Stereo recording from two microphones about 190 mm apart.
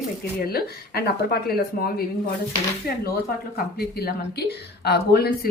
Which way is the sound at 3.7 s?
55° left (ahead or behind).